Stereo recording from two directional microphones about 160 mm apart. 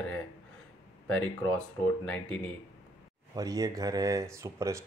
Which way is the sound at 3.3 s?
20° right (ahead or behind).